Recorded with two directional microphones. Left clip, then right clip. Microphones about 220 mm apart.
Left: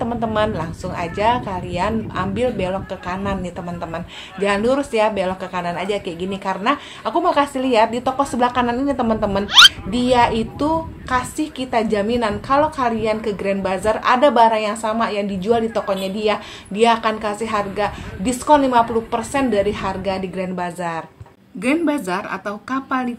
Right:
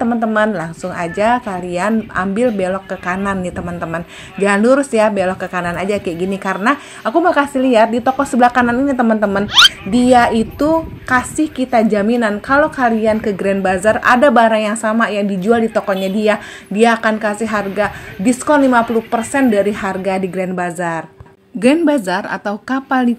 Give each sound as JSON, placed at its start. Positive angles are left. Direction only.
{"t": 0.0, "sound": "a woman's voice", "side_deg": -30}
{"t": 9.5, "sound": "speech", "side_deg": 0}
{"t": 9.8, "sound": "a woman's voice", "side_deg": -30}
{"t": 21.5, "sound": "a woman's voice", "side_deg": -50}